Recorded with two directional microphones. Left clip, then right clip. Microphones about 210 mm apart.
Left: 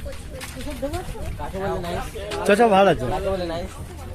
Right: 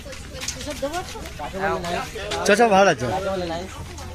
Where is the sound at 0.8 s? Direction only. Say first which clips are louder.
Right 1 dB; 25° left (ahead or behind).